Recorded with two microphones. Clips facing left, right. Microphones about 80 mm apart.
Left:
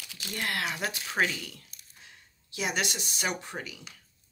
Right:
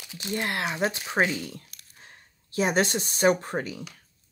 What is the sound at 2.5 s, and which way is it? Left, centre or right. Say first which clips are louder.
Speech: right 8 dB; right.